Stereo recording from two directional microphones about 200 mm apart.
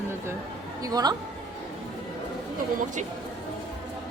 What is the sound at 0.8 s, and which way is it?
Speech, 20° right (ahead or behind).